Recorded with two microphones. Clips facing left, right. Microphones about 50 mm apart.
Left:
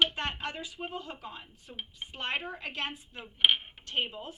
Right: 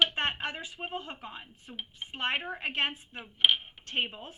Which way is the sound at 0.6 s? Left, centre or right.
Right.